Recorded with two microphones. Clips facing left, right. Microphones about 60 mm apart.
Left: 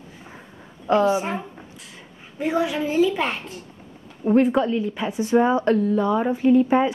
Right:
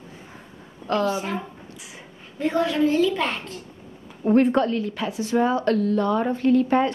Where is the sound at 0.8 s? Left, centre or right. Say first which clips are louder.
Left 4 dB; centre.